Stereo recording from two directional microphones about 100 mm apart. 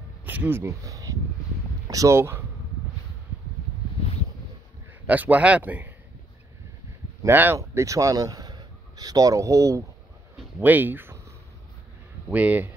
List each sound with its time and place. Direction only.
0.2 s speech: 15° right (ahead or behind)
5.0 s speech: 15° right (ahead or behind)
7.2 s speech: 20° right (ahead or behind)
7.5 s speech: 30° right (ahead or behind)
10.6 s speech: 20° right (ahead or behind)
12.3 s speech: 15° right (ahead or behind)